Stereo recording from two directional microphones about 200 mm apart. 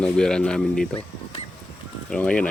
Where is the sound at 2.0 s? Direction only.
5° left (ahead or behind).